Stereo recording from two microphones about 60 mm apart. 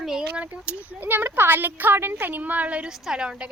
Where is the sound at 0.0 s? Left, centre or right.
Centre.